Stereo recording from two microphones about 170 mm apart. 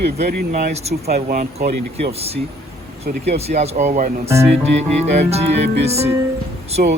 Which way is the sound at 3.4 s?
40° right (ahead or behind).